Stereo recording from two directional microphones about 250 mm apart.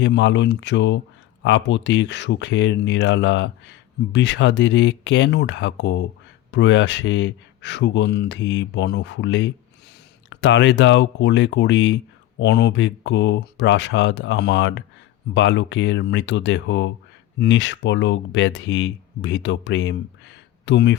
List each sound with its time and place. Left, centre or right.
0.0 s speech: left